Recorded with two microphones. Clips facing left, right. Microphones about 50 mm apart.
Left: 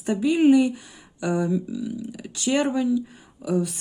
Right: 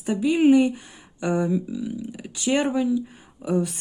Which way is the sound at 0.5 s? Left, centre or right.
Right.